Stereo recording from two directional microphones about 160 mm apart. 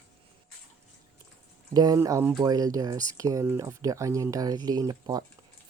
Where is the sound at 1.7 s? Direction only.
25° right (ahead or behind).